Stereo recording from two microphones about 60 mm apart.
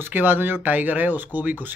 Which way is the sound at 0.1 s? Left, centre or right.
Right.